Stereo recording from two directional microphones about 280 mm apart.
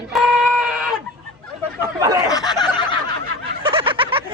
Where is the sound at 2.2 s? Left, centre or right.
Centre.